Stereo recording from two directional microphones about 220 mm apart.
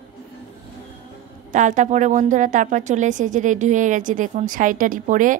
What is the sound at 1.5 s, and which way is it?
A woman's voice, 35° right (ahead or behind).